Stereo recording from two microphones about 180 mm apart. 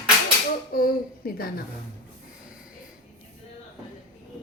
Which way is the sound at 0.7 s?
55° left (ahead or behind).